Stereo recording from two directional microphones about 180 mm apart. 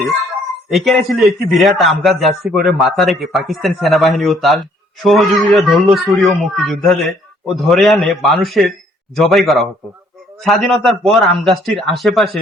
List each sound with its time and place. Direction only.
0.7 s speech: centre (ahead or behind)